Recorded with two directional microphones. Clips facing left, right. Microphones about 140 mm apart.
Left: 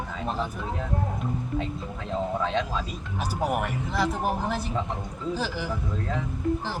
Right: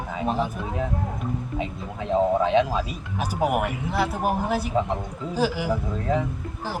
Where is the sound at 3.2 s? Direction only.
10° right (ahead or behind).